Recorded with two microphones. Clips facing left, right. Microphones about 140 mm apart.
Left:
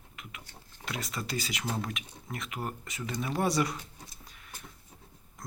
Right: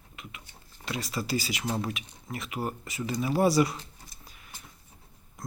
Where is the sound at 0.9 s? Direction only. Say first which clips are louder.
Right 5 dB; centre (ahead or behind).